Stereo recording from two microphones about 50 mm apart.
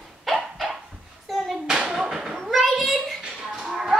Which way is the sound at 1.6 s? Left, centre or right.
Centre.